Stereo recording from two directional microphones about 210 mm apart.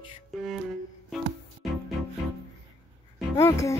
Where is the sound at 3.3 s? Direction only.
15° left (ahead or behind).